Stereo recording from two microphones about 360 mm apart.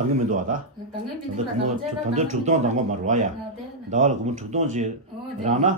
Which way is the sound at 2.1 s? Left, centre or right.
Centre.